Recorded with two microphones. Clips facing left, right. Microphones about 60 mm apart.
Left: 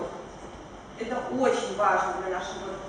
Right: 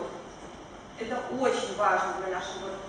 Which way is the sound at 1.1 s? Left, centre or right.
Centre.